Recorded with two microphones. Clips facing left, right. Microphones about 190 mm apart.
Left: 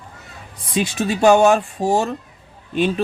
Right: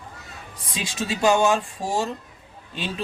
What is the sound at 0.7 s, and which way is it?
Speech, 60° left (ahead or behind).